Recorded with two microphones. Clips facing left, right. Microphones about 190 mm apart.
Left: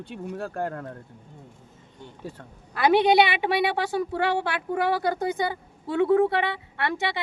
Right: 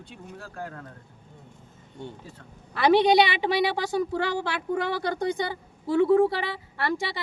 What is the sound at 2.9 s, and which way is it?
Speech, 55° left (ahead or behind).